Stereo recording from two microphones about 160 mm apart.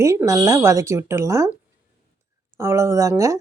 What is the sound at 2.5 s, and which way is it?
Speech, 15° right (ahead or behind).